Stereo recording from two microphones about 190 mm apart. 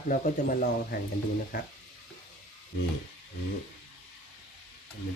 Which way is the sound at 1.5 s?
50° left (ahead or behind).